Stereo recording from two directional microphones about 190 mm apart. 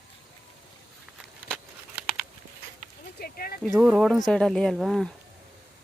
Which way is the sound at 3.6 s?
Centre (ahead or behind).